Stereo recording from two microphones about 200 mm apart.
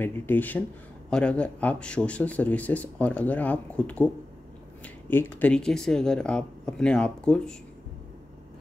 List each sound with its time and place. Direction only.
0.0 s speech: 10° left (ahead or behind)